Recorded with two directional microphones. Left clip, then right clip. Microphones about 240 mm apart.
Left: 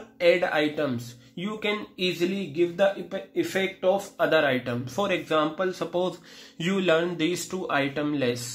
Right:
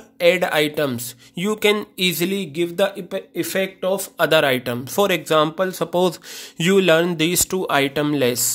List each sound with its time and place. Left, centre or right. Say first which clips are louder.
0.2 s speech: right 5 dB; right